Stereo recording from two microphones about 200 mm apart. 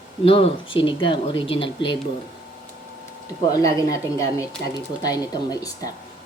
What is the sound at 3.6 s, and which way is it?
Speech, 15° left (ahead or behind).